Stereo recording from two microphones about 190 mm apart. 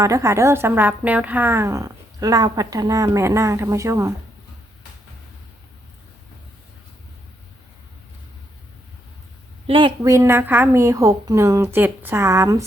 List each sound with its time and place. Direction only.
0.0 s a woman's voice: 15° right (ahead or behind)
9.6 s a woman's voice: 25° right (ahead or behind)